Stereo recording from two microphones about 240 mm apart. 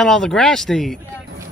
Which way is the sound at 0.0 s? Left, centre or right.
Centre.